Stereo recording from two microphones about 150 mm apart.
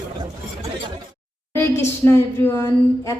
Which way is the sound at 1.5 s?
15° left (ahead or behind).